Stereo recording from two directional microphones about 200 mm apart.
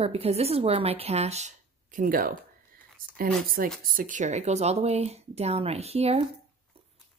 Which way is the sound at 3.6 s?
45° right (ahead or behind).